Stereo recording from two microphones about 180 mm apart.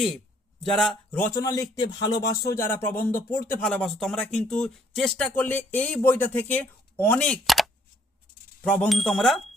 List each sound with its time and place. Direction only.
0.6 s speech: centre (ahead or behind)
7.4 s a sound: centre (ahead or behind)
8.6 s speech: 5° left (ahead or behind)